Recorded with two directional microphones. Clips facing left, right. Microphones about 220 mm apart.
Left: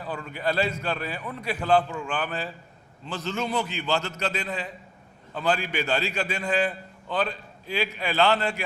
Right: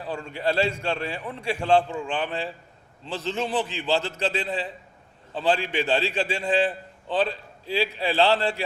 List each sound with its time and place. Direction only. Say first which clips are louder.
0.0 s a man's voice: right 2 dB; 30° right (ahead or behind)